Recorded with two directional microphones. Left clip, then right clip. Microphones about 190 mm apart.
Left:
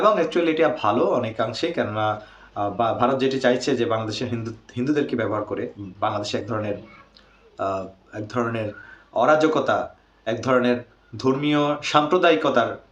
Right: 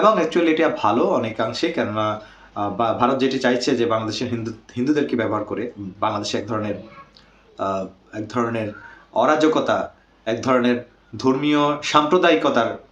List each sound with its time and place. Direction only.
0.0 s speech: 5° left (ahead or behind)